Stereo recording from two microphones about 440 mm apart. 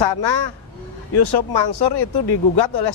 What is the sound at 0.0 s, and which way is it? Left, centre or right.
Speech, left.